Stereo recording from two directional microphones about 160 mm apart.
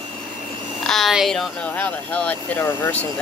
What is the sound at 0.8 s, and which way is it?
Speech, centre (ahead or behind).